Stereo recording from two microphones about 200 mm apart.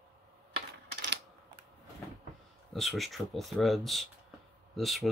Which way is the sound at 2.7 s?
Centre (ahead or behind).